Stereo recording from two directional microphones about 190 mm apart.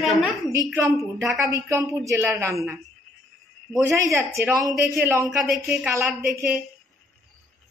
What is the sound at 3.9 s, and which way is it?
Speech, 15° right (ahead or behind).